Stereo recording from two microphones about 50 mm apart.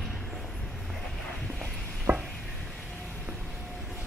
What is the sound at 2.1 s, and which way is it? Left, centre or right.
Stir, right.